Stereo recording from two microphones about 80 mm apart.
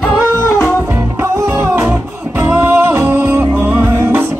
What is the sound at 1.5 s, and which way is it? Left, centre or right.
Music, right.